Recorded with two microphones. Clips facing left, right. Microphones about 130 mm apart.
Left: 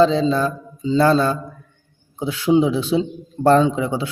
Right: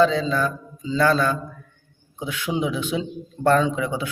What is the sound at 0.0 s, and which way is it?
Speech, 30° left (ahead or behind).